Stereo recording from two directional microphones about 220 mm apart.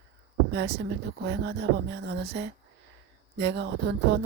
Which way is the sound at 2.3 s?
50° right (ahead or behind).